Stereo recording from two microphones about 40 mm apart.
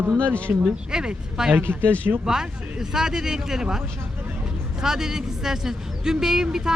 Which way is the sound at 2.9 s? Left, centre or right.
Centre.